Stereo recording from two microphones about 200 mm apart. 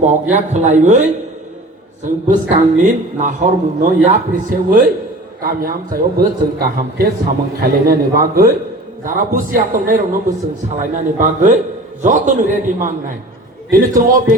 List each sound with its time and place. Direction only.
0.0 s a man's voice: 35° right (ahead or behind)
2.2 s a man's voice: 40° right (ahead or behind)